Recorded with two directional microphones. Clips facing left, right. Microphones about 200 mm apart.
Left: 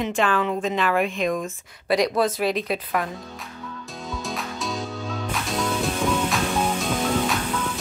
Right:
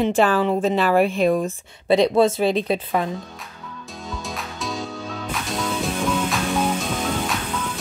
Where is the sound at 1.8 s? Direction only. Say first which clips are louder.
Right 5 dB; 25° right (ahead or behind).